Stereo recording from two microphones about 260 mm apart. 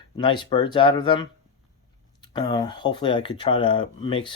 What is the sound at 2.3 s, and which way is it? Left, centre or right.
Speech, centre.